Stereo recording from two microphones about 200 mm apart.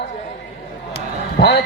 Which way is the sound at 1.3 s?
60° left (ahead or behind).